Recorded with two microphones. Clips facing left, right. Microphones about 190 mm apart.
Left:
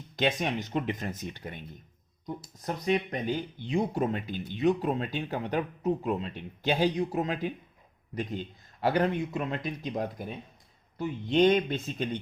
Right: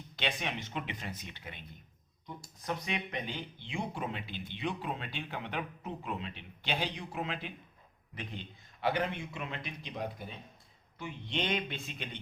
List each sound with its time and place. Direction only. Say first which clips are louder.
0.2 s speech: left 8 dB; 45° left (ahead or behind)
8.8 s speech: left 6 dB; 40° left (ahead or behind)